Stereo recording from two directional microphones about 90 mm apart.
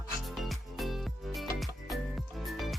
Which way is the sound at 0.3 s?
Centre (ahead or behind).